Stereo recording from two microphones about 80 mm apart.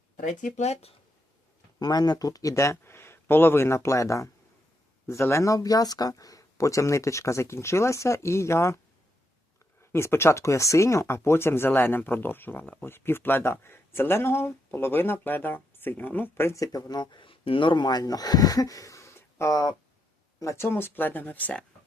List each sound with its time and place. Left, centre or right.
1.8 s speech: left
9.9 s speech: left
16.6 s speech: left
20.7 s speech: left